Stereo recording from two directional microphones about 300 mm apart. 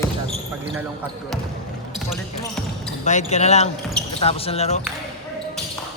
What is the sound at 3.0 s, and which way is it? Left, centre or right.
Speech, left.